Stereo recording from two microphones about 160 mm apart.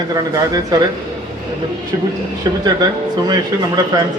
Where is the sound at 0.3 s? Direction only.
20° right (ahead or behind).